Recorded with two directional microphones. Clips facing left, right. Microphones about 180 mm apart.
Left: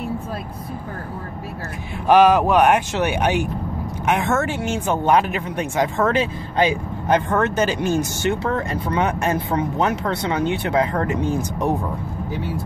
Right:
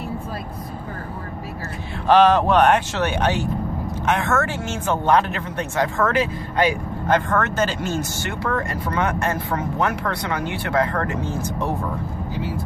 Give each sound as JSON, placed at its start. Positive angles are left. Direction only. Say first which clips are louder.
{"t": 2.0, "sound": "speech", "louder": "left 1 dB", "side_deg": 10}